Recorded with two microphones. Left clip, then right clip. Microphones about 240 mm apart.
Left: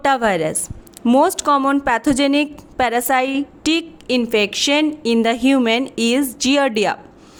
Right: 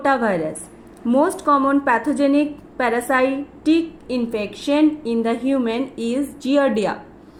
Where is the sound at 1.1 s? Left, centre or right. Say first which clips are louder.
Left 2 dB; left.